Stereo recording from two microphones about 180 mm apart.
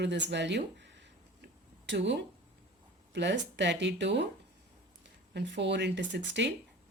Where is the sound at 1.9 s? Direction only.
75° right (ahead or behind).